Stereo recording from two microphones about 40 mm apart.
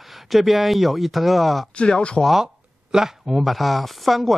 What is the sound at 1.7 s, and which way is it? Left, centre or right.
Speech, left.